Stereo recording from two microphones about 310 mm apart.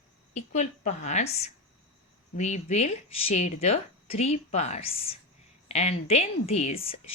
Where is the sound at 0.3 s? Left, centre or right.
Left.